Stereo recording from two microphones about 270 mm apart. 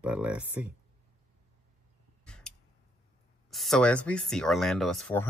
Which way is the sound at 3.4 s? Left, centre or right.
Centre.